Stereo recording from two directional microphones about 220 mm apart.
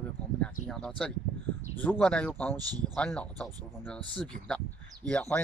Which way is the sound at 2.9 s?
5° left (ahead or behind).